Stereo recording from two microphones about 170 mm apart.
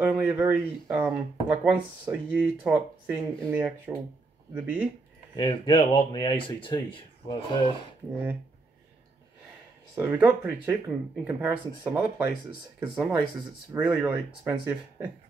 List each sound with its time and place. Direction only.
0.0 s speech: 10° right (ahead or behind)
5.3 s speech: 30° left (ahead or behind)
9.9 s speech: 10° right (ahead or behind)